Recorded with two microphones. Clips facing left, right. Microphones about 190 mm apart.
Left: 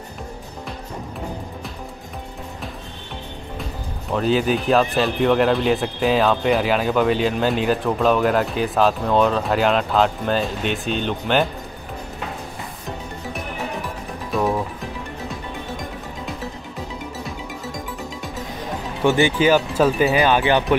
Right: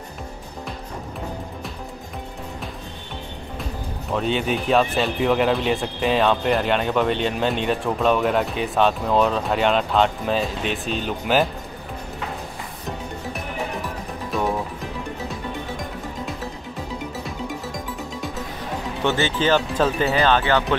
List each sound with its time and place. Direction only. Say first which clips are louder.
4.1 s speech: left 4 dB; centre (ahead or behind)
14.3 s music: left 3 dB; centre (ahead or behind)
19.0 s speech: left 4 dB; 15° left (ahead or behind)